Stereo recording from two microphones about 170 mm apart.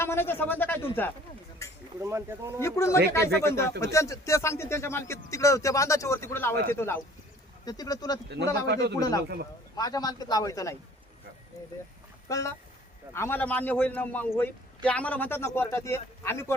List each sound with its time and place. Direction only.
0.0 s speech: 15° left (ahead or behind)
2.0 s speech: 15° right (ahead or behind)
2.6 s a man's voice: 15° left (ahead or behind)
8.6 s a man's voice: 75° right (ahead or behind)
9.0 s a man's voice: 20° left (ahead or behind)
9.2 s a man's voice: 70° right (ahead or behind)
9.7 s a man's voice: 20° left (ahead or behind)
12.3 s speech: 20° left (ahead or behind)